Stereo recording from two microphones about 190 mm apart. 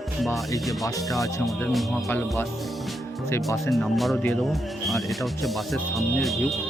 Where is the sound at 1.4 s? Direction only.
Centre (ahead or behind).